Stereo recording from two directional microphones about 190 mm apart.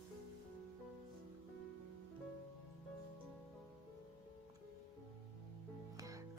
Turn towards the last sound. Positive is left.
turn(degrees=-15)  # may be behind; listen again after turning